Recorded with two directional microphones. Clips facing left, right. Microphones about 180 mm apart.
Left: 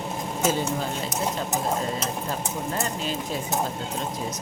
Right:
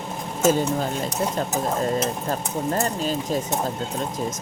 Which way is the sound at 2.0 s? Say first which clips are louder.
Right 4 dB; 40° right (ahead or behind).